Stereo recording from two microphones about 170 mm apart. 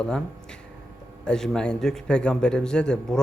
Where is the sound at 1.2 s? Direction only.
5° left (ahead or behind).